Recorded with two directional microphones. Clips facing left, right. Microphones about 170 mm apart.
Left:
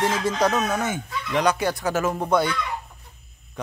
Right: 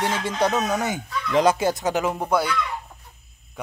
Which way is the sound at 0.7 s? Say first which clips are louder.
Right 1 dB; 15° right (ahead or behind).